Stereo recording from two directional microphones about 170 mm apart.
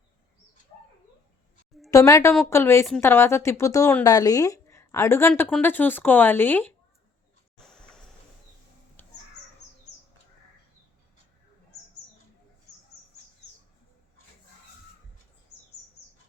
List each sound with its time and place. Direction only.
1.9 s a woman's voice: 20° left (ahead or behind)
7.6 s a sound: 5° left (ahead or behind)
9.0 s crow: 10° left (ahead or behind)